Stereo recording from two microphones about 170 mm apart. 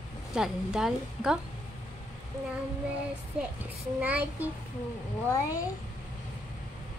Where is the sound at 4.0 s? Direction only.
10° right (ahead or behind).